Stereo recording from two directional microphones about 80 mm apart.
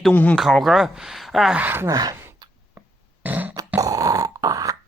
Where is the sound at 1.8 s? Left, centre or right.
Right.